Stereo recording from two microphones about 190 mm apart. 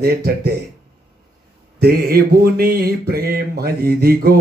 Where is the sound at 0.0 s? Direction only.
55° right (ahead or behind).